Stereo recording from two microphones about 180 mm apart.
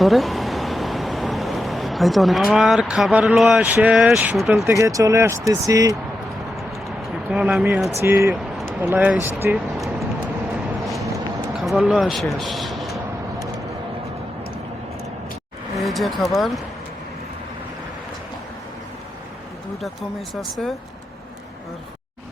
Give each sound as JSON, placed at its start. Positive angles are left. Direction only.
{"t": 0.0, "sound": "speech", "side_deg": 0}
{"t": 4.6, "sound": "speech", "side_deg": -15}
{"t": 7.3, "sound": "speech", "side_deg": -5}
{"t": 8.0, "sound": "speech", "side_deg": -15}
{"t": 9.6, "sound": "vehicle", "side_deg": 0}
{"t": 11.5, "sound": "speech", "side_deg": 0}
{"t": 15.8, "sound": "vehicle", "side_deg": 0}
{"t": 19.8, "sound": "speech", "side_deg": 0}